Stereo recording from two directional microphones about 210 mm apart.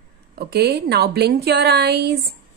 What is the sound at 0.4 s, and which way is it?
A woman's voice, 50° right (ahead or behind).